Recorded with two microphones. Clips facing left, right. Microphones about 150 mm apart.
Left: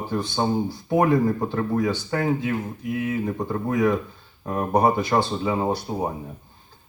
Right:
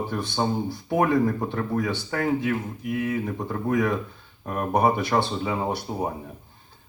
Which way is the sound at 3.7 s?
20° left (ahead or behind).